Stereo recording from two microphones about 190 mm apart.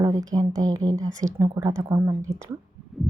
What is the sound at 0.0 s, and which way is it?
Speech, 20° right (ahead or behind).